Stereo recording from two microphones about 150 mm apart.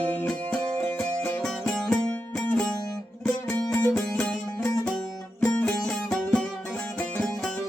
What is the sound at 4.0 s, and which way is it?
Music, 5° left (ahead or behind).